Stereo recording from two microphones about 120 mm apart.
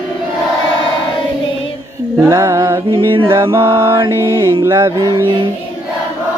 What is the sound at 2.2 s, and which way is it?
Mantra, 25° right (ahead or behind).